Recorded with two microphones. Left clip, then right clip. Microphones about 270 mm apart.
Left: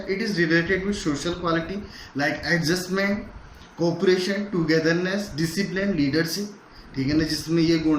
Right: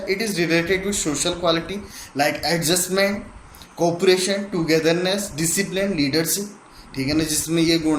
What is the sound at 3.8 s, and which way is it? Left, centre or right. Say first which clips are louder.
Speech: right 4 dB; right.